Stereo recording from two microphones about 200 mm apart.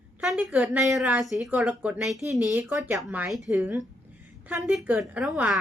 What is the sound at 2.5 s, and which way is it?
Speech, 15° right (ahead or behind).